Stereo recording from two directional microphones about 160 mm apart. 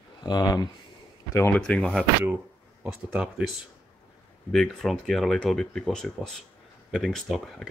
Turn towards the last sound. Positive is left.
turn(degrees=0)  # may be behind; listen again after turning